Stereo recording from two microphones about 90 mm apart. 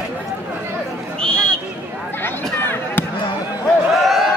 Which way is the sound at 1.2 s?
10° left (ahead or behind).